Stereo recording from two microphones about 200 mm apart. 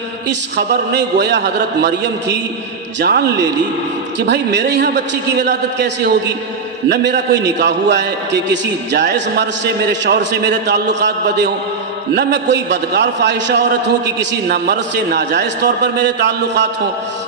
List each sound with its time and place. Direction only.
0.9 s a man's voice: 60° right (ahead or behind)